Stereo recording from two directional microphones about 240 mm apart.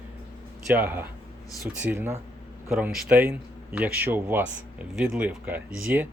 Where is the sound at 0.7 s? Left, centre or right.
Centre.